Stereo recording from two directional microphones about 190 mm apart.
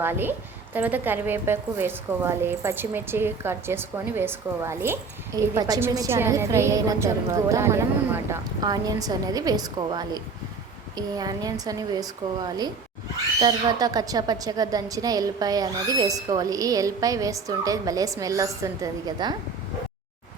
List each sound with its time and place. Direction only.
0.0 s a woman's voice: 10° right (ahead or behind)